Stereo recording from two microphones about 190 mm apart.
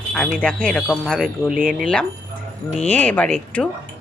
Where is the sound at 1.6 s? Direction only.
45° right (ahead or behind).